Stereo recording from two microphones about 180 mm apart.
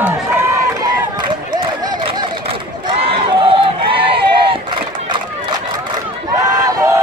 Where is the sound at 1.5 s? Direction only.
25° right (ahead or behind).